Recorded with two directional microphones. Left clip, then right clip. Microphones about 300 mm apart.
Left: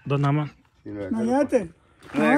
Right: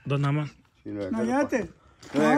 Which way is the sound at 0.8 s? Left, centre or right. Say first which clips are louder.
Even; centre.